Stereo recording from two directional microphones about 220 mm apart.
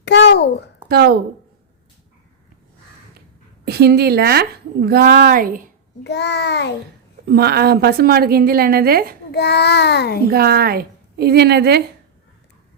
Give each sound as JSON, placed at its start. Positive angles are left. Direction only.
{"t": 0.0, "sound": "a sound", "side_deg": 50}
{"t": 0.9, "sound": "a woman's voice", "side_deg": -45}
{"t": 3.7, "sound": "a woman's voice", "side_deg": -45}
{"t": 6.0, "sound": "a child's voice", "side_deg": 50}
{"t": 7.3, "sound": "a woman's voice", "side_deg": -45}
{"t": 9.3, "sound": "a child's voice", "side_deg": 50}
{"t": 10.2, "sound": "a woman's voice", "side_deg": -45}